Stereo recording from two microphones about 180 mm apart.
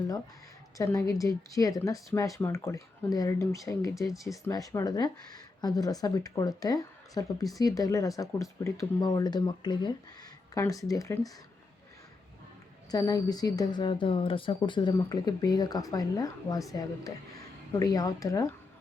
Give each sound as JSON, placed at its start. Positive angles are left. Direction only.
{"t": 0.8, "sound": "speech", "side_deg": 20}
{"t": 12.9, "sound": "speech", "side_deg": 20}